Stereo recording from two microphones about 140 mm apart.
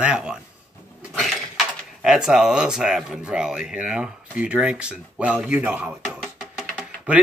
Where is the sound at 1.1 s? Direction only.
Centre (ahead or behind).